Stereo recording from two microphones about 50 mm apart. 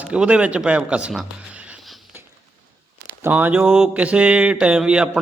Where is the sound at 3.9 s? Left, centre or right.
Right.